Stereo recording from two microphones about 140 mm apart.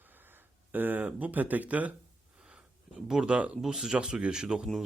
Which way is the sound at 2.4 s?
5° right (ahead or behind).